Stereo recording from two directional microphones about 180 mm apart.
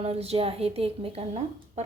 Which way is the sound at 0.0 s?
35° right (ahead or behind).